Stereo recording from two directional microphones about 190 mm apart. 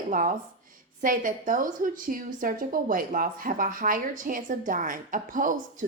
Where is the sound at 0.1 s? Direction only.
45° right (ahead or behind).